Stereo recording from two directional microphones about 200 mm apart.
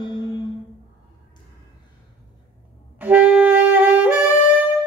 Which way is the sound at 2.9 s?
10° right (ahead or behind).